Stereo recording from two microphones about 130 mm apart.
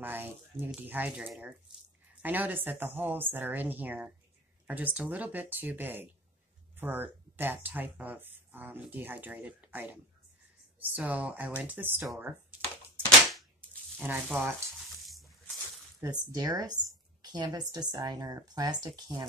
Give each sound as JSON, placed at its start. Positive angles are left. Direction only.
{"t": 0.0, "sound": "speech", "side_deg": -15}
{"t": 2.2, "sound": "speech", "side_deg": -15}
{"t": 12.2, "sound": "a sound", "side_deg": -15}
{"t": 13.9, "sound": "speech", "side_deg": -15}
{"t": 16.0, "sound": "speech", "side_deg": -30}